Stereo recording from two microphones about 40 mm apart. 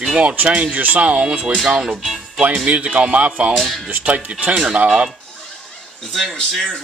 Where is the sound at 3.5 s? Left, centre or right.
Centre.